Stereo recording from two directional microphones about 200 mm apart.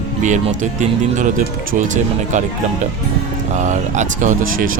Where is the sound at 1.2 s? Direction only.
40° right (ahead or behind).